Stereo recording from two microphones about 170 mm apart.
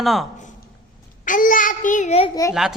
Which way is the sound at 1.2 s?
50° left (ahead or behind).